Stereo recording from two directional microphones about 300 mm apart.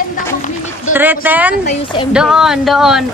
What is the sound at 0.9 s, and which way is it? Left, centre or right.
Speech, centre.